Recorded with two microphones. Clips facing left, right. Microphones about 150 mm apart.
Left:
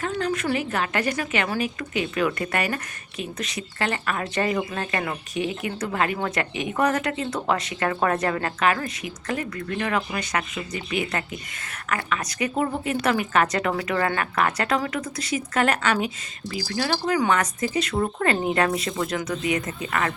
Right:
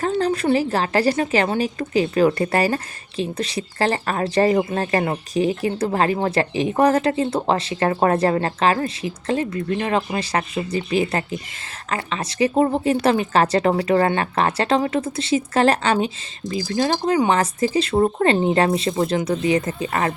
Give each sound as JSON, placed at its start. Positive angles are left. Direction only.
{"t": 0.0, "sound": "a woman's voice", "side_deg": -35}